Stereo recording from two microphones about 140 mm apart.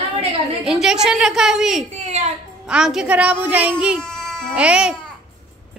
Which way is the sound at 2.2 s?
55° right (ahead or behind).